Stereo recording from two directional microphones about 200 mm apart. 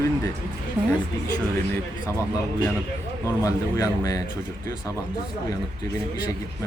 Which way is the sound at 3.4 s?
15° left (ahead or behind).